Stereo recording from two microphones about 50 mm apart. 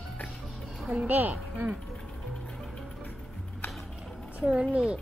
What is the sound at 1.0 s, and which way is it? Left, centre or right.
Speech, right.